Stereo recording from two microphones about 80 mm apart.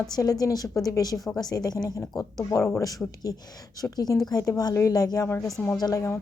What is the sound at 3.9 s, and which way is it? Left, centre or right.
A woman's voice, left.